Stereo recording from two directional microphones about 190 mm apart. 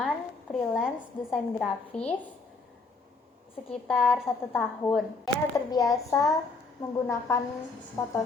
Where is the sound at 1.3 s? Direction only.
5° left (ahead or behind).